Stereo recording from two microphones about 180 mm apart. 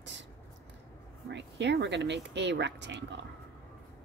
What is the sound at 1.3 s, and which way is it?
Speech, 75° right (ahead or behind).